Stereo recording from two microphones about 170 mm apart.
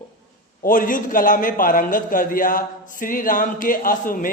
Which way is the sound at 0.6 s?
55° left (ahead or behind).